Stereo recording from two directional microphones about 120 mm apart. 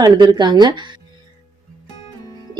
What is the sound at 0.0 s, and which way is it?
Speech, 35° right (ahead or behind).